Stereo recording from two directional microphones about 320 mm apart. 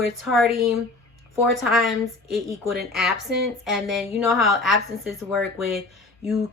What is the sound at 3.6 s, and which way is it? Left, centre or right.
Speech, centre.